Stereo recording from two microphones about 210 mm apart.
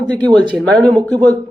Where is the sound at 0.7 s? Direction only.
20° right (ahead or behind).